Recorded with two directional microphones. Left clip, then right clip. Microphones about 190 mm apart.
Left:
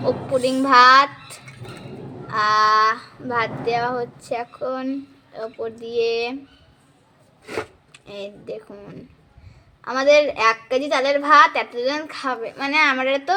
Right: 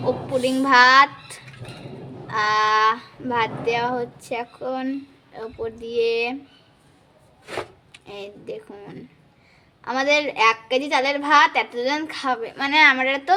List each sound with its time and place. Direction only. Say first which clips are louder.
0.4 s speech: left 2 dB; 10° right (ahead or behind)
2.2 s speech: left 3 dB; 15° right (ahead or behind)
7.9 s speech: left 2 dB; 10° right (ahead or behind)